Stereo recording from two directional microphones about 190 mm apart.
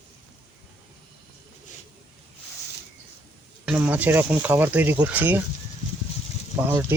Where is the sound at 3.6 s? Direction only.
5° right (ahead or behind).